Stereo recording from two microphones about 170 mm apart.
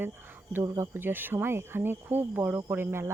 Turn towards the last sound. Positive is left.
turn(degrees=-15)  # may be behind; listen again after turning